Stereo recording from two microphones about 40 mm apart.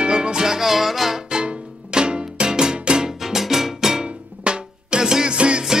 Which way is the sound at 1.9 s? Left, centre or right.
Right.